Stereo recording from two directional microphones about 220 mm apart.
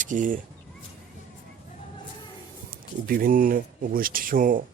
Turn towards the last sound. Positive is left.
turn(degrees=-40)  # may be behind; listen again after turning